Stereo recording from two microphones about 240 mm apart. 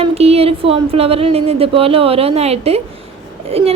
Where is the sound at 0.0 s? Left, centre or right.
Right.